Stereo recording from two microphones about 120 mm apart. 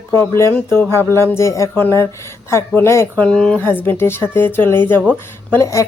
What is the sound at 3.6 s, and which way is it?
A woman's voice, 20° left (ahead or behind).